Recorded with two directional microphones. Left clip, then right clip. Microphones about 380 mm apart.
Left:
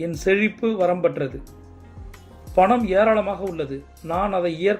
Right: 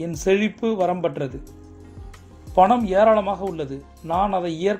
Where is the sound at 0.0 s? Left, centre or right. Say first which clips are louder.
Left 1 dB; centre.